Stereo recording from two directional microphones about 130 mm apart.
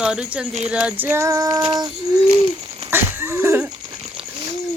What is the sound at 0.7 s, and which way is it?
Child singing, 10° right (ahead or behind).